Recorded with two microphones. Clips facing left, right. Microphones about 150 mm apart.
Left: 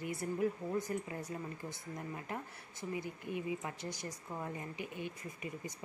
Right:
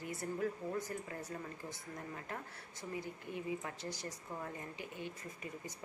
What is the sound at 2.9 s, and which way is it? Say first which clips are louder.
Speech: left 3 dB; 15° left (ahead or behind).